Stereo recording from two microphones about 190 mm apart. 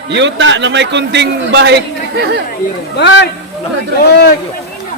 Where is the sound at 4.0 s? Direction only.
55° left (ahead or behind).